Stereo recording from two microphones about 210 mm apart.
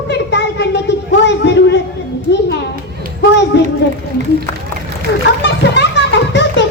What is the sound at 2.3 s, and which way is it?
Children playing, 55° left (ahead or behind).